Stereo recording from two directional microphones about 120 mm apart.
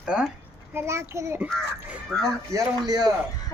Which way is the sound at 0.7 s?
25° right (ahead or behind).